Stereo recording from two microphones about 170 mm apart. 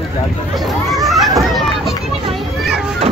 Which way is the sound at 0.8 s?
Centre (ahead or behind).